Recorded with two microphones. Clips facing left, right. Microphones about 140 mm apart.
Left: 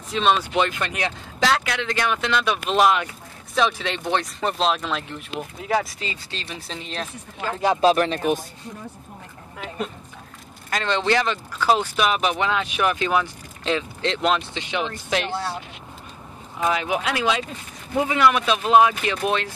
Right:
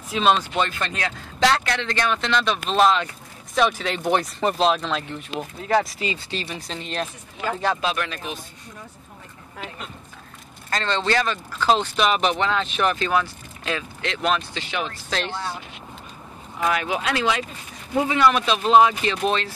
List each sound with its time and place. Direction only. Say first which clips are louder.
0.1 s speech: right 1 dB; 5° right (ahead or behind)
0.6 s speech: left 2 dB; 15° left (ahead or behind)
3.5 s speech: right 1 dB; centre (ahead or behind)
5.9 s speech: right 5 dB; 10° right (ahead or behind)
7.8 s speech: left 8 dB; 35° left (ahead or behind)
10.7 s speech: left 1 dB; 10° left (ahead or behind)
16.5 s speech: left 1 dB; 20° left (ahead or behind)